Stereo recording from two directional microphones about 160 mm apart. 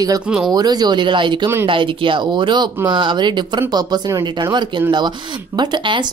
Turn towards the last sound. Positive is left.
turn(degrees=-30)  # may be behind; listen again after turning